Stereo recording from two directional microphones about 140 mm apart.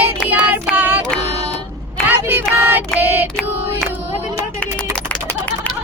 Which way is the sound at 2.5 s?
15° right (ahead or behind).